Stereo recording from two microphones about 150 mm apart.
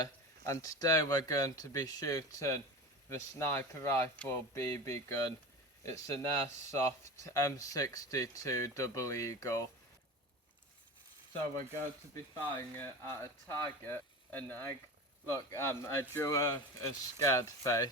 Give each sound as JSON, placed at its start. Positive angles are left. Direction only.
{"t": 0.0, "sound": "speech", "side_deg": 20}
{"t": 12.1, "sound": "speech", "side_deg": 15}